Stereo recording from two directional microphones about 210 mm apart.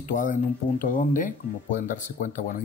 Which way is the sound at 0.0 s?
40° left (ahead or behind).